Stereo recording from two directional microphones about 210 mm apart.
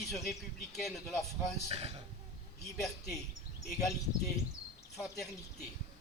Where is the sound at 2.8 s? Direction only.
Centre (ahead or behind).